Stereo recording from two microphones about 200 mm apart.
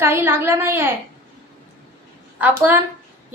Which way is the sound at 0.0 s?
10° right (ahead or behind).